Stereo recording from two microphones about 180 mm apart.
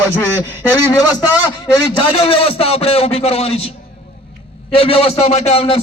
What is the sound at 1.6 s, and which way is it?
A man's voice, 30° left (ahead or behind).